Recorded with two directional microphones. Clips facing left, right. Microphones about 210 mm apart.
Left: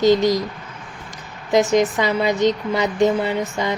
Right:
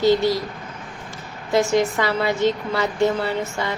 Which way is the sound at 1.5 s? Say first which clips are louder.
Left 2 dB; 15° left (ahead or behind).